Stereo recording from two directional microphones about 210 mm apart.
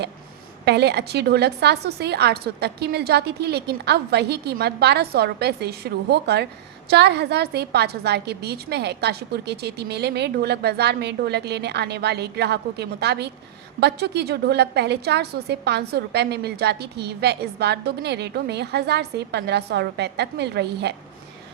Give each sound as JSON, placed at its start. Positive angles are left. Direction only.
{"t": 0.6, "sound": "a woman's voice", "side_deg": -50}